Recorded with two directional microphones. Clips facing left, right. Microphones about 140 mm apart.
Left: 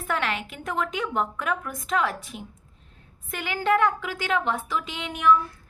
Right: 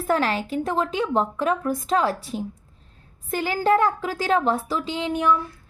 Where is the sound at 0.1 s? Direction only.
35° right (ahead or behind).